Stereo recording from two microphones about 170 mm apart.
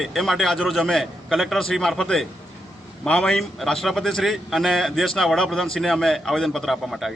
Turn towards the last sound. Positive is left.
turn(degrees=0)  # may be behind; listen again after turning